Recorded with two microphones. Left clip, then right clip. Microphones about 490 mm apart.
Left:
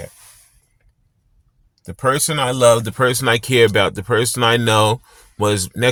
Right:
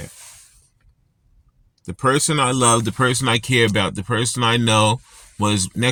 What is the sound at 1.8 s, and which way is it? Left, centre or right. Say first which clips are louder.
Speech: even; left.